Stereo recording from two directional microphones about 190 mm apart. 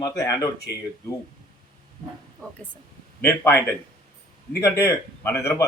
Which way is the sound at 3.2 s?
10° left (ahead or behind).